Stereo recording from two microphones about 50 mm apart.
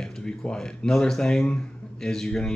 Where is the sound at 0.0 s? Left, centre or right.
Centre.